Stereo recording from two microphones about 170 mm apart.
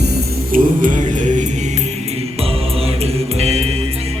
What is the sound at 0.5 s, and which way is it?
Music, 55° right (ahead or behind).